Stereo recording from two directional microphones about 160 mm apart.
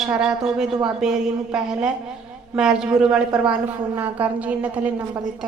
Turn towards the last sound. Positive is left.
turn(degrees=-10)  # may be behind; listen again after turning